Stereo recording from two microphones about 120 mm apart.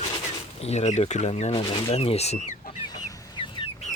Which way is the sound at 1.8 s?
55° left (ahead or behind).